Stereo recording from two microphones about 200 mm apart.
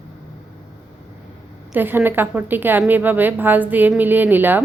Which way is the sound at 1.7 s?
10° right (ahead or behind).